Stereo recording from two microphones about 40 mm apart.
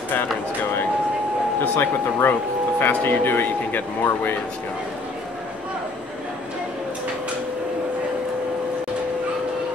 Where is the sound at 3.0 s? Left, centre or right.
Left.